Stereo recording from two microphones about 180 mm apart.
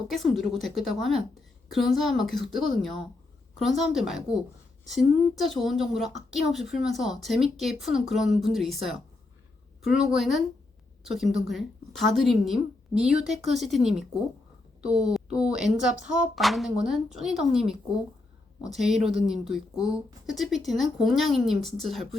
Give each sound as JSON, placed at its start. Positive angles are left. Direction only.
{"t": 0.1, "sound": "a woman's voice", "side_deg": 0}